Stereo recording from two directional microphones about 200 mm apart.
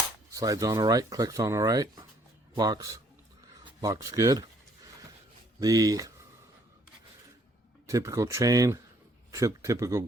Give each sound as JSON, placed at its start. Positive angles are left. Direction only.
{"t": 0.3, "sound": "speech", "side_deg": -15}
{"t": 5.5, "sound": "speech", "side_deg": -20}
{"t": 7.9, "sound": "speech", "side_deg": -15}